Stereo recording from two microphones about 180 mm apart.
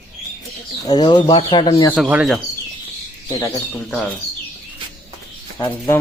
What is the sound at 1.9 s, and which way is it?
Speech, 5° right (ahead or behind).